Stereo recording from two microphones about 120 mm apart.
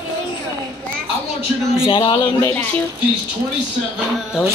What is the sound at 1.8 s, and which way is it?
Speech, 45° left (ahead or behind).